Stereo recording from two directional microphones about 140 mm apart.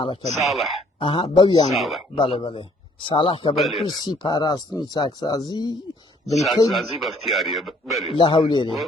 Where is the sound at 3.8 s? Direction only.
30° left (ahead or behind).